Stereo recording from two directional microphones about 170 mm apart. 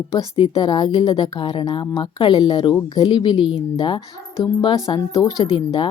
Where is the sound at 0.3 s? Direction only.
30° left (ahead or behind).